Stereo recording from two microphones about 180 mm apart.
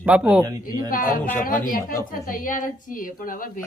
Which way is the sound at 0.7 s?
50° left (ahead or behind).